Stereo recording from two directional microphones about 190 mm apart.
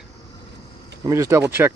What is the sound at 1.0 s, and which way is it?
Speech, 15° right (ahead or behind).